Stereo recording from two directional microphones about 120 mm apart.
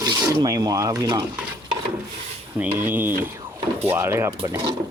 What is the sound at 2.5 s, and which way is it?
Speech, 15° right (ahead or behind).